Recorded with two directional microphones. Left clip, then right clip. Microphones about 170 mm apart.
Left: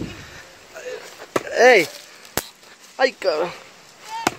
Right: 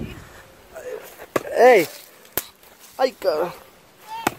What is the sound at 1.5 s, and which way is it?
Speech, 20° right (ahead or behind).